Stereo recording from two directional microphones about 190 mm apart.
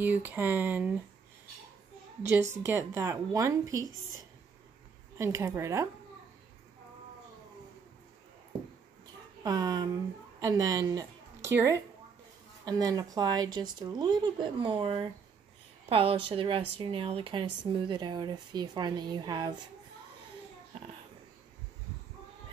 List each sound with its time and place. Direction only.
0.0 s speech: 10° right (ahead or behind)
2.6 s speech: 15° right (ahead or behind)
5.1 s speech: 15° right (ahead or behind)
9.4 s a woman's voice: 20° right (ahead or behind)